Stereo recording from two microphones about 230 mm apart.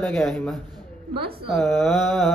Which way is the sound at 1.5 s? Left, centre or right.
Centre.